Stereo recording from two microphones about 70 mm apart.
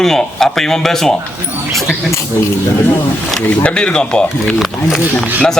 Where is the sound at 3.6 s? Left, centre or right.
Centre.